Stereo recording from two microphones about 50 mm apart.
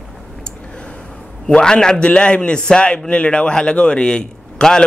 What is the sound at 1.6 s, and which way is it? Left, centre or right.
A man's voice, centre.